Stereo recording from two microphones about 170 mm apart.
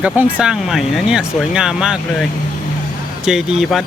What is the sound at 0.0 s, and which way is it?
Speech, 10° right (ahead or behind).